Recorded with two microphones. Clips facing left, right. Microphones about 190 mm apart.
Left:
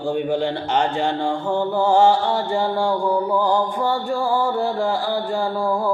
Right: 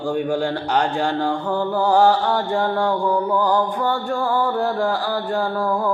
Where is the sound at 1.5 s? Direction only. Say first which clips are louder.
Left 1 dB; 15° left (ahead or behind).